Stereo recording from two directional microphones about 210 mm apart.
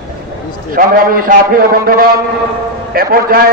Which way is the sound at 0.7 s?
45° right (ahead or behind).